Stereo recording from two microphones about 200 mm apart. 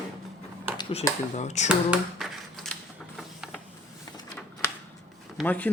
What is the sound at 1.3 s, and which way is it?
Speech, 35° left (ahead or behind).